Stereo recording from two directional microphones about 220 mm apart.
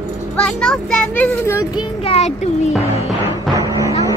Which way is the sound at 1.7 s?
25° left (ahead or behind).